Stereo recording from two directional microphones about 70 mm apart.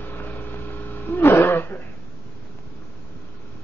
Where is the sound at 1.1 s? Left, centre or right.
Left.